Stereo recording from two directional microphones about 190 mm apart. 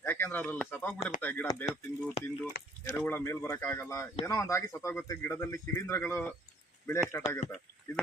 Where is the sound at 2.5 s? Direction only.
50° left (ahead or behind).